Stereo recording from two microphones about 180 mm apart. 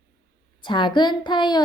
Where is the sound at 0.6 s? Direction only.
25° left (ahead or behind).